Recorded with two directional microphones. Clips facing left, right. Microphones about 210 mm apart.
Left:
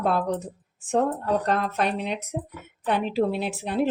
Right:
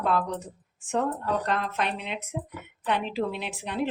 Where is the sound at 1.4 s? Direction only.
40° left (ahead or behind).